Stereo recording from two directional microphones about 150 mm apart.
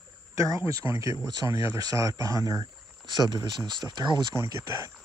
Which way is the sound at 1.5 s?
35° left (ahead or behind).